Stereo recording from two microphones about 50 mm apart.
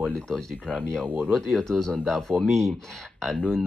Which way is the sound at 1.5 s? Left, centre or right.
Centre.